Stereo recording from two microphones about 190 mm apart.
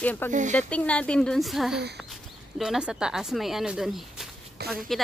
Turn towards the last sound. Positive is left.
turn(degrees=0)  # may be behind; listen again after turning